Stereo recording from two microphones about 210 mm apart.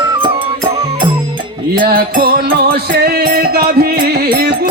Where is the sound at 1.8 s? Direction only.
45° right (ahead or behind).